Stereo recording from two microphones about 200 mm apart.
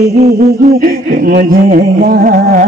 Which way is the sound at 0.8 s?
45° right (ahead or behind).